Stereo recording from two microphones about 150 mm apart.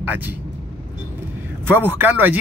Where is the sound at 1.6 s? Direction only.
15° right (ahead or behind).